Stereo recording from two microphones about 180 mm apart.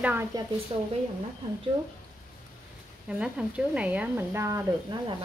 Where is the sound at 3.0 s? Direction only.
5° right (ahead or behind).